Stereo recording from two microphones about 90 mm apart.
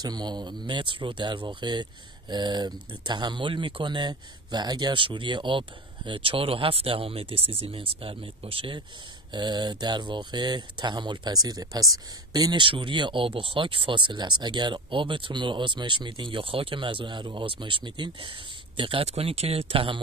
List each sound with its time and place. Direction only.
0.0 s speech: 50° right (ahead or behind); by 8.8 s 80° right
9.3 s speech: 55° right (ahead or behind)
12.5 s speech: 70° right (ahead or behind); by 20.0 s 90° right